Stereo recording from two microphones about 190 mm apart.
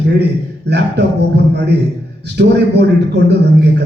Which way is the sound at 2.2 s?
65° right (ahead or behind).